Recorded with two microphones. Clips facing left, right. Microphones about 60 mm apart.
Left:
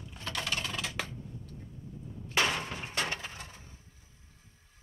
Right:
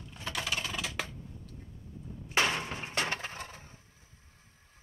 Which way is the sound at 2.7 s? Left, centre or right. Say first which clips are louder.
Right 1 dB; right.